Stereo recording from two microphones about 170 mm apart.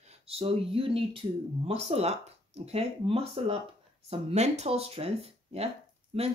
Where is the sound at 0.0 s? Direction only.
35° right (ahead or behind).